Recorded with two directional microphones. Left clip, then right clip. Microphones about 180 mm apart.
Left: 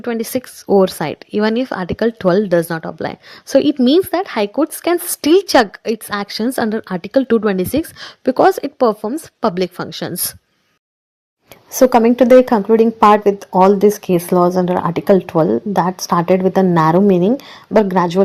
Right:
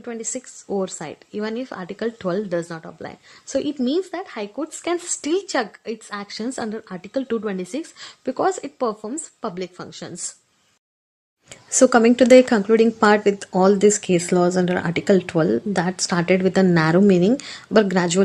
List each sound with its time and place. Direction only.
0.0 s a woman's voice: 45° left (ahead or behind)
11.7 s a woman's voice: 10° left (ahead or behind)